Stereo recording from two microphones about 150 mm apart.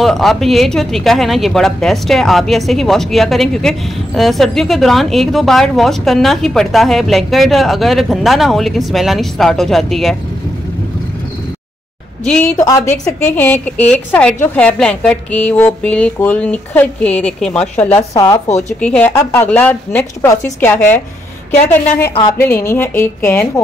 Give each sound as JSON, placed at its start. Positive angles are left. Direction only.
{"t": 0.0, "sound": "speech", "side_deg": 0}
{"t": 12.3, "sound": "speech", "side_deg": 5}
{"t": 12.5, "sound": "speech", "side_deg": 25}
{"t": 13.2, "sound": "a woman's voice", "side_deg": 15}
{"t": 18.1, "sound": "speech", "side_deg": 20}
{"t": 18.8, "sound": "a woman's voice", "side_deg": 5}
{"t": 22.4, "sound": "a woman's voice", "side_deg": 15}